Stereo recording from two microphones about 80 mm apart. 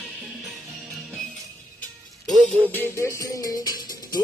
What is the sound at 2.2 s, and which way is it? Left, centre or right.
Music, centre.